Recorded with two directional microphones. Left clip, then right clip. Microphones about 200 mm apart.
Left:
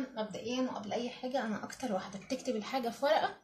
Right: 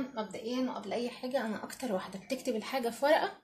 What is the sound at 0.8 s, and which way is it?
Speech, 35° right (ahead or behind).